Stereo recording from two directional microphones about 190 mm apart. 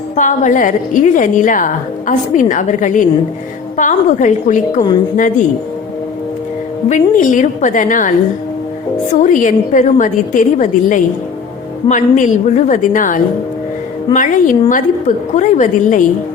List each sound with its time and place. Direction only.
0.2 s a woman's voice: 40° left (ahead or behind)
6.8 s a woman's voice: 40° left (ahead or behind)
9.1 s a woman's voice: 40° left (ahead or behind)